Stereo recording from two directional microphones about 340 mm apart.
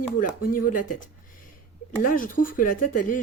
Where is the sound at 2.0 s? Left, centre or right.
Left.